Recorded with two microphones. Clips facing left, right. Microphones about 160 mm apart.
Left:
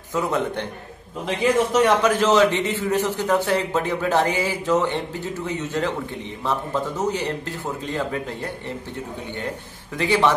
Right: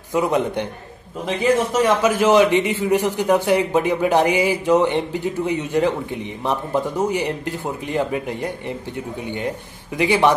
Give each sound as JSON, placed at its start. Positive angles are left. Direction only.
{"t": 0.1, "sound": "a man's voice", "side_deg": -15}
{"t": 1.7, "sound": "a man's voice", "side_deg": -10}
{"t": 9.9, "sound": "a man's voice", "side_deg": -15}